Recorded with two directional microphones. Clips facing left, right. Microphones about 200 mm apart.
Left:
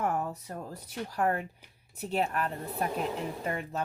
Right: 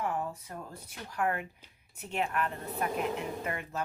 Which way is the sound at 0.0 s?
40° left (ahead or behind).